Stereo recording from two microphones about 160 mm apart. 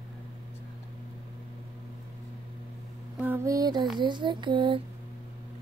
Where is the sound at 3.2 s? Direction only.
15° right (ahead or behind); by 4.8 s 30° right (ahead or behind).